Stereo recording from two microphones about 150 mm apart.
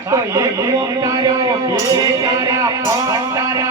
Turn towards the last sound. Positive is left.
turn(degrees=-20)  # may be behind; listen again after turning